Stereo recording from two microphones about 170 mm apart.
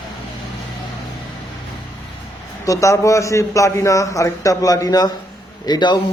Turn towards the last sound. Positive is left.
turn(degrees=25)  # may be behind; listen again after turning